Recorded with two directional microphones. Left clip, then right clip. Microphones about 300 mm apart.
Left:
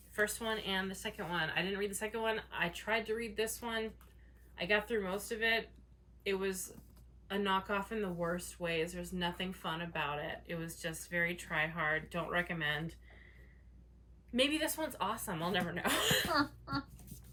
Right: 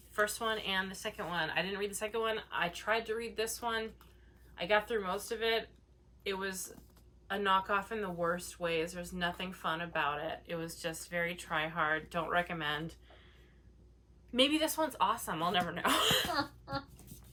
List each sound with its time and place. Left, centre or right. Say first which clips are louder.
0.1 s speech: right 2 dB; centre
14.3 s speech: right 3 dB; centre